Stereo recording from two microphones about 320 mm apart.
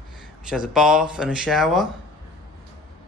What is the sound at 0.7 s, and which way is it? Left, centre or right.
Speech, centre.